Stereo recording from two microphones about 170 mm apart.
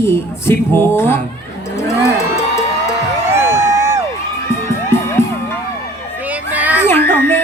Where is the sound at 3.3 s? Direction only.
15° right (ahead or behind).